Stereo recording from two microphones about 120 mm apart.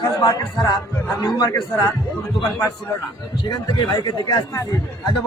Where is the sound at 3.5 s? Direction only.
35° left (ahead or behind).